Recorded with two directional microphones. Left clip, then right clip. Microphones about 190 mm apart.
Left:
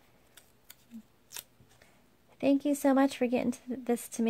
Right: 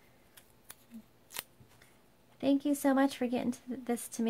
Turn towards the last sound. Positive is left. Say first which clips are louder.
# left 4 dB
turn(degrees=30)  # may be behind; listen again after turning